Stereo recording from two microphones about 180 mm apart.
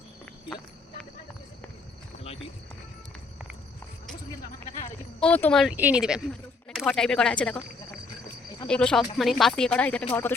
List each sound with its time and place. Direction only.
2.1 s a sound: 35° left (ahead or behind)
5.2 s speech: 5° left (ahead or behind)
5.7 s speech: 5° right (ahead or behind)